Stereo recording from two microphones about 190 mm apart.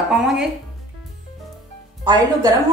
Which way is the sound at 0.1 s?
Centre (ahead or behind).